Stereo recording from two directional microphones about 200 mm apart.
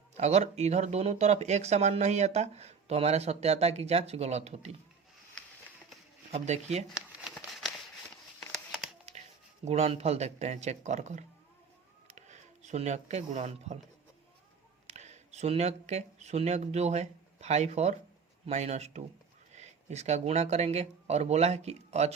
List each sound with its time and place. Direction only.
0.2 s speech: 35° right (ahead or behind)
6.3 s speech: 35° right (ahead or behind)
6.9 s a sound: centre (ahead or behind)
8.4 s crumpling: centre (ahead or behind)
9.6 s speech: 30° right (ahead or behind)
14.8 s speech: 35° right (ahead or behind)